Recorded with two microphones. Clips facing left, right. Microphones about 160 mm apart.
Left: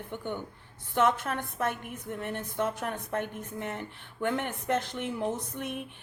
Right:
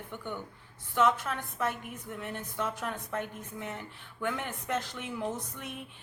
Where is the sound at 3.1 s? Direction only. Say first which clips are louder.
Left 3 dB; 55° left (ahead or behind).